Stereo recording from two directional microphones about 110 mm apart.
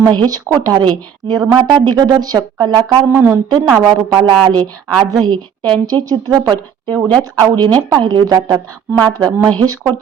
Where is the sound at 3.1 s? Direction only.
20° right (ahead or behind).